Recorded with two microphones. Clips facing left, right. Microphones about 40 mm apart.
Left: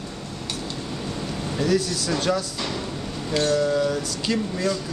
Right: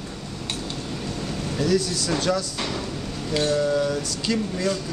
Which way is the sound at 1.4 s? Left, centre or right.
Centre.